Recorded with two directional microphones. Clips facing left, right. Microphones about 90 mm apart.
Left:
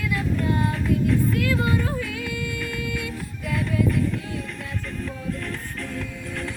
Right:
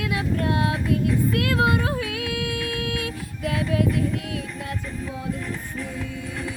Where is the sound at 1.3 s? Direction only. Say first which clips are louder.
Right 2 dB; 70° right (ahead or behind).